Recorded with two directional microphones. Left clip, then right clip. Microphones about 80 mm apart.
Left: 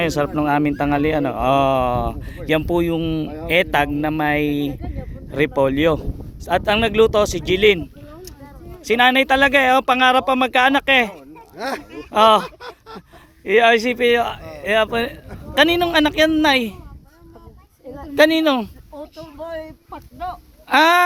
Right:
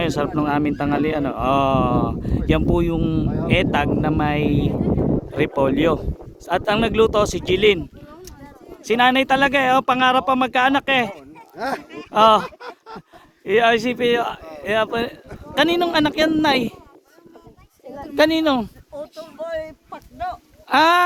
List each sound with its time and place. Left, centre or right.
0.0 s a woman's voice: centre; by 3.0 s right
3.0 s speech: right
3.4 s speech: right
8.8 s a woman's voice: right
18.1 s a woman's voice: centre
19.4 s a sound: right
20.7 s a woman's voice: centre